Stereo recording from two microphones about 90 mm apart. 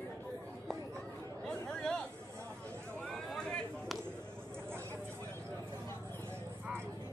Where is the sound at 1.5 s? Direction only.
5° left (ahead or behind).